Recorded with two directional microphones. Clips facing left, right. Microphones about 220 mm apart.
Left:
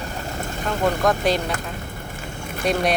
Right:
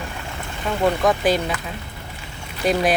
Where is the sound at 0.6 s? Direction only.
Centre (ahead or behind).